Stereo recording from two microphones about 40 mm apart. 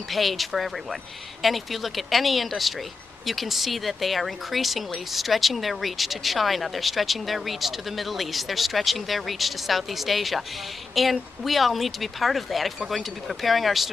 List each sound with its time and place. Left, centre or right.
0.1 s speech: centre